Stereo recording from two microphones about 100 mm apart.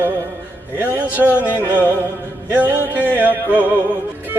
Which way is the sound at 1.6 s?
20° right (ahead or behind).